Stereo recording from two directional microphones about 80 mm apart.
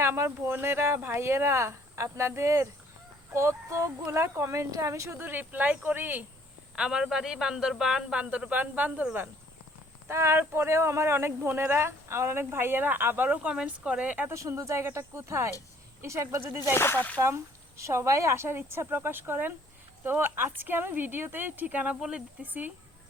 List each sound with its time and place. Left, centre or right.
0.0 s speech: right
6.7 s speech: centre
10.1 s speech: right; by 14.3 s centre
14.3 s speech: right
16.7 s speech: left
17.2 s speech: right